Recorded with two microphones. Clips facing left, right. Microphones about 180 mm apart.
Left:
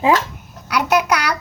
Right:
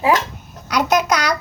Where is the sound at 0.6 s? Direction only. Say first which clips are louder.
Even; 10° left (ahead or behind).